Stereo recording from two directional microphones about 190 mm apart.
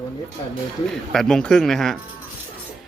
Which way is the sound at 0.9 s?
Centre (ahead or behind).